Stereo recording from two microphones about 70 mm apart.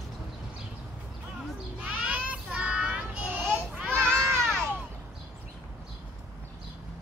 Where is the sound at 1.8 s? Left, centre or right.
Centre.